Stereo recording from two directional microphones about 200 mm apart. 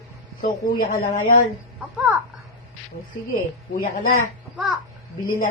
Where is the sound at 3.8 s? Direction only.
40° left (ahead or behind).